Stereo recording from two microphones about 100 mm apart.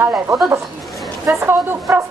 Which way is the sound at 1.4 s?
25° right (ahead or behind).